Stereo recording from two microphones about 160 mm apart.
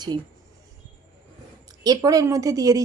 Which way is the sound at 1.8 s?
25° right (ahead or behind).